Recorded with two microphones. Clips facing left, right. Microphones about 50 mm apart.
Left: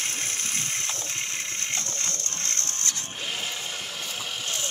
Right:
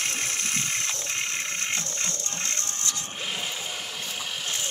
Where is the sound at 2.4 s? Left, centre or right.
Right.